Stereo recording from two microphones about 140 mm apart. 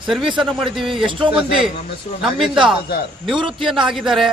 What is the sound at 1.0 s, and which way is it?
Speech, 35° right (ahead or behind).